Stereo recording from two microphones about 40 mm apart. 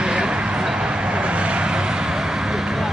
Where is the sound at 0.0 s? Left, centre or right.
Right.